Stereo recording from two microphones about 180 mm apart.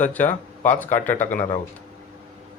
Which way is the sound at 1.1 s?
45° left (ahead or behind).